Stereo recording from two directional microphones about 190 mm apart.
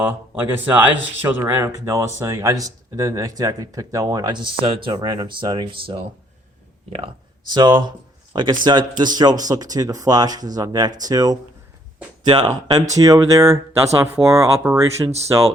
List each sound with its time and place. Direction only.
0.6 s speech: 10° right (ahead or behind)
7.5 s speech: 25° right (ahead or behind)